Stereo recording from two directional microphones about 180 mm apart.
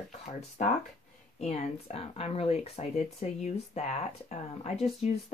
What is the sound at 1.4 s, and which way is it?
Speech, 35° left (ahead or behind).